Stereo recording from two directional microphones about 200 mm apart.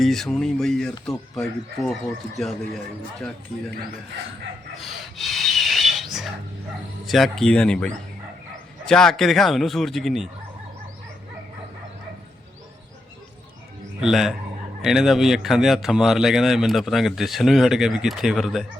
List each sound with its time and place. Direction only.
0.0 s speech: centre (ahead or behind)
4.8 s rub: centre (ahead or behind)
7.0 s speech: centre (ahead or behind)
8.9 s speech: 5° left (ahead or behind)
14.0 s speech: centre (ahead or behind)